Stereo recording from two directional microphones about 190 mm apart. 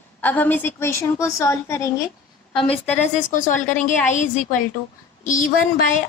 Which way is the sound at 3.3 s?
40° left (ahead or behind).